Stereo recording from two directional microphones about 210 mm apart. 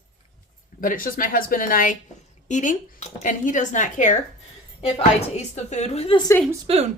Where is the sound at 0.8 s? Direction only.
40° left (ahead or behind).